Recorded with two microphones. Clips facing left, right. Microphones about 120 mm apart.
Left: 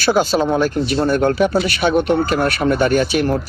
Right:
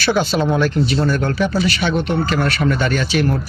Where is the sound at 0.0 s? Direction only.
45° left (ahead or behind).